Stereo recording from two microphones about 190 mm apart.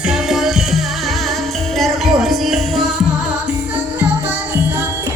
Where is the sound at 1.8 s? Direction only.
Centre (ahead or behind).